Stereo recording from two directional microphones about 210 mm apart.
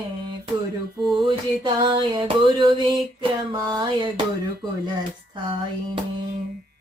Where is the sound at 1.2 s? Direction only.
25° right (ahead or behind).